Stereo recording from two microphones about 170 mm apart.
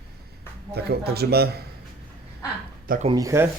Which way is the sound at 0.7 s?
70° right (ahead or behind).